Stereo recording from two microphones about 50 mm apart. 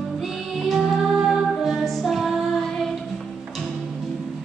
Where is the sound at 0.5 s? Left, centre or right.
Centre.